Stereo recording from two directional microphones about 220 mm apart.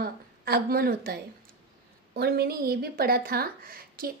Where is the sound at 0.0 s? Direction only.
45° right (ahead or behind).